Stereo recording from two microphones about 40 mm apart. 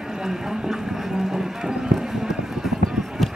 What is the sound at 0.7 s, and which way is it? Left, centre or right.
Clip-clop, centre.